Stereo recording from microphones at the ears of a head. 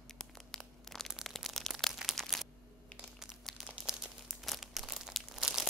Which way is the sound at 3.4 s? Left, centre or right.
Centre.